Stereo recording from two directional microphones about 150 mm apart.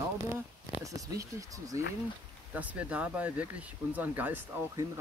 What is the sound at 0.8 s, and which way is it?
Speech, 20° right (ahead or behind).